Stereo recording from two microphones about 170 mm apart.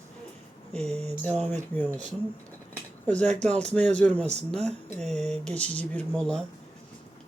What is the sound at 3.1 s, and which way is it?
Speech, 5° left (ahead or behind).